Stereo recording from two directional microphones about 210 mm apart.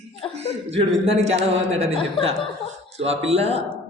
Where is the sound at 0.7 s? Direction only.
30° right (ahead or behind).